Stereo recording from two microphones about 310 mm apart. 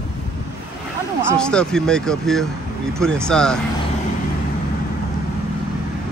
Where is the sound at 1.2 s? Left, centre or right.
Centre.